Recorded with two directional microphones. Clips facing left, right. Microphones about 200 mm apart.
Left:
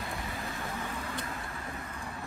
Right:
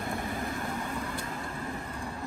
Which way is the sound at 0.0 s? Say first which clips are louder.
Right 5 dB; 50° right (ahead or behind).